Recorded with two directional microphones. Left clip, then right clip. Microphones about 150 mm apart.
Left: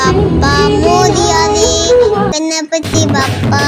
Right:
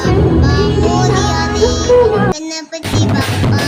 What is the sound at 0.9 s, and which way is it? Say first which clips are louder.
Music: left 5 dB; 35° left (ahead or behind).